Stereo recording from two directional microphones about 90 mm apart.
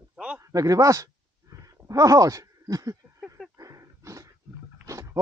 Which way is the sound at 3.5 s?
40° right (ahead or behind).